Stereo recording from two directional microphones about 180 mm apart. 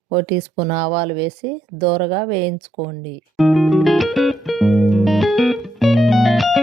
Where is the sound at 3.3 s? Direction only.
Centre (ahead or behind).